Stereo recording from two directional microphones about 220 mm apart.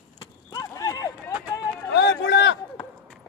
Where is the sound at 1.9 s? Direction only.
55° left (ahead or behind).